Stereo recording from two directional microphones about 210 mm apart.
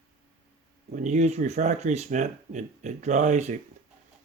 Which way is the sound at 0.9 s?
35° right (ahead or behind).